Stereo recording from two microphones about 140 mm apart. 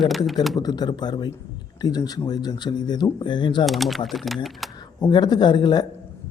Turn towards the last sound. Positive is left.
turn(degrees=30)  # may be behind; listen again after turning